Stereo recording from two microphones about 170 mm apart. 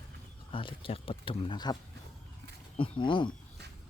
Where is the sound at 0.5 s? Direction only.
30° left (ahead or behind).